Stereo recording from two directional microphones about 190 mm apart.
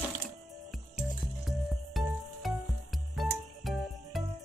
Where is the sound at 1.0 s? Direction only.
Centre (ahead or behind).